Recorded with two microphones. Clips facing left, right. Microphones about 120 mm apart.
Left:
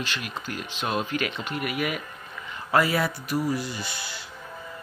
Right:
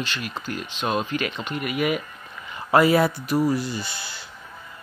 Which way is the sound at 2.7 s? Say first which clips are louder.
Right 6 dB; 25° right (ahead or behind).